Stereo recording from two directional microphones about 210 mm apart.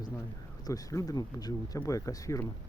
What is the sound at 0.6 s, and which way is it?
Speech, 15° left (ahead or behind).